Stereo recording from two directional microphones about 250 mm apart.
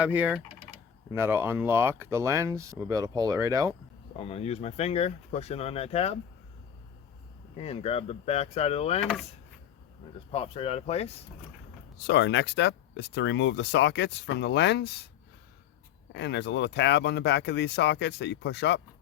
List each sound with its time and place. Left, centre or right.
0.0 s speech: centre
4.2 s speech: left
7.5 s speech: left
10.3 s speech: left
12.0 s speech: left
16.1 s speech: left